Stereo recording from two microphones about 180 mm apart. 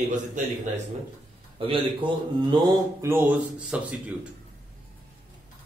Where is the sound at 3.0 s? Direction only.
15° right (ahead or behind).